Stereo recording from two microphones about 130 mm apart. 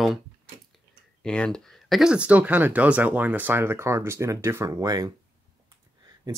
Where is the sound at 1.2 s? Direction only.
5° left (ahead or behind); by 5.2 s 30° right (ahead or behind).